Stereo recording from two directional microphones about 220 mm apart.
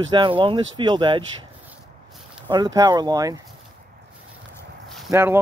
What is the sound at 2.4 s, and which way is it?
Speech, 20° right (ahead or behind).